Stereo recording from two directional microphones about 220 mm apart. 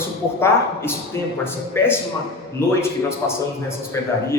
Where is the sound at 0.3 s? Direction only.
10° left (ahead or behind).